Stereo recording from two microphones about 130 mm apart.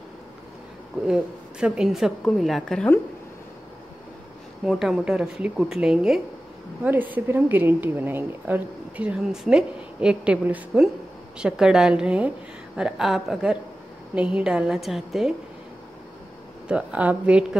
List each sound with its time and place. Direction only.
1.0 s a woman's voice: 5° right (ahead or behind)
4.6 s a woman's voice: 5° right (ahead or behind)
6.8 s a woman's voice: 15° right (ahead or behind)
16.6 s a woman's voice: 10° right (ahead or behind)